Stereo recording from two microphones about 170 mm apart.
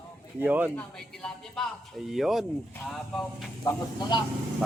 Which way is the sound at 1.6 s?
5° left (ahead or behind).